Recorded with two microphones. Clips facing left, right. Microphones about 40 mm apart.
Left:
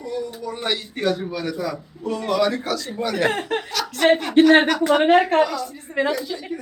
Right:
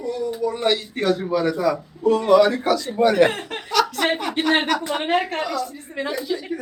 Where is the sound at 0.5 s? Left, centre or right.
Centre.